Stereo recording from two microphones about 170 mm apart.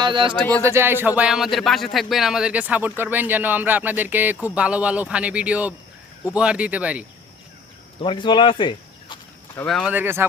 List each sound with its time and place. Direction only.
0.0 s speech: 30° right (ahead or behind)
0.6 s speech: 15° right (ahead or behind)
8.0 s speech: 30° left (ahead or behind)
9.6 s speech: centre (ahead or behind)
9.9 s speech: 10° right (ahead or behind)